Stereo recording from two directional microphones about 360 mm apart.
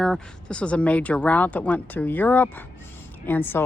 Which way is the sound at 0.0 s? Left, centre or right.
Centre.